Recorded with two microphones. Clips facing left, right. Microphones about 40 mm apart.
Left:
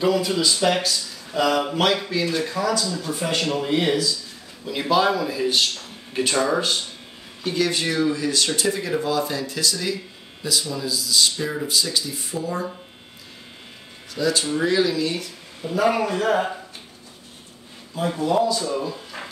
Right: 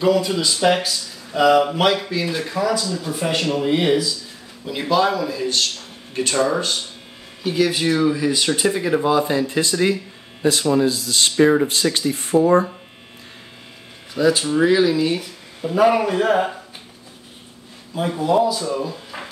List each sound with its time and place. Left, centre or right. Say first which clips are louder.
0.0 s speech: right 2 dB; centre
4.6 s speech: right 1 dB; centre
7.4 s speech: right 4 dB; centre; by 12.6 s right
14.1 s speech: right 5 dB; centre
17.9 s speech: right 3 dB; centre